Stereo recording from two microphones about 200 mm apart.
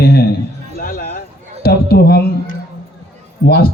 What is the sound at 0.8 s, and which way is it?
Music, 45° left (ahead or behind).